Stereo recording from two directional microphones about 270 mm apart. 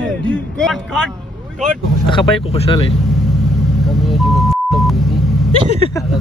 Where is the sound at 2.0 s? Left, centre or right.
Centre.